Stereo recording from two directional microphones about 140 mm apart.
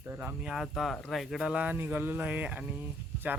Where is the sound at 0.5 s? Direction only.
Centre (ahead or behind).